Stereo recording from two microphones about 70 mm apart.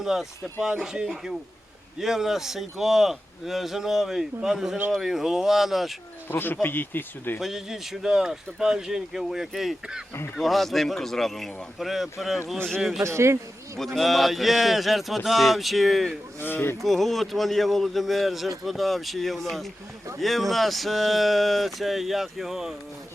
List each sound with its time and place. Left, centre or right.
0.0 s speech: centre
6.2 s speech: left
7.3 s speech: centre
13.0 s speech: right
13.7 s speech: centre
16.4 s speech: left
16.8 s speech: centre